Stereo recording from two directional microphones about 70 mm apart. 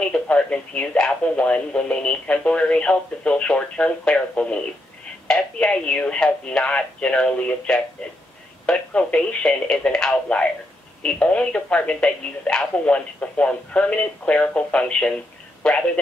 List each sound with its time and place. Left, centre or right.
0.1 s speech: centre